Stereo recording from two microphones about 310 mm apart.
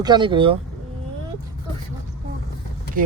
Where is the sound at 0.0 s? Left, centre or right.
Centre.